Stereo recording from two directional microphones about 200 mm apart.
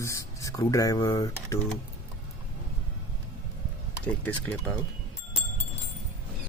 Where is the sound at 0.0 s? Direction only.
15° left (ahead or behind).